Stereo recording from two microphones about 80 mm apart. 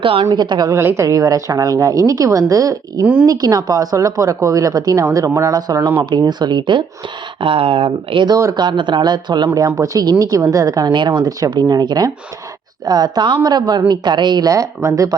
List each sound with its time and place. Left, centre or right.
0.3 s speech: right
0.7 s a woman's voice: right
1.0 s a woman's voice: right
6.0 s speech: right
7.4 s speech: right
8.5 s a woman's voice: right
9.6 s a woman's voice: right
10.9 s a woman's voice: right
11.5 s a woman's voice: right
14.5 s a woman's voice: right